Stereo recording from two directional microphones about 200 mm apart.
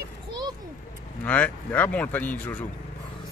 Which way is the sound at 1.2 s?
5° left (ahead or behind).